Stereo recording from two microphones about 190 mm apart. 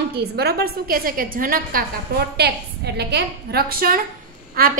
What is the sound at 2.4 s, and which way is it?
A woman's voice, 60° right (ahead or behind).